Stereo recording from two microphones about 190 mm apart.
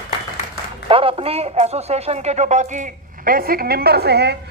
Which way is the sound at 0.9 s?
30° right (ahead or behind).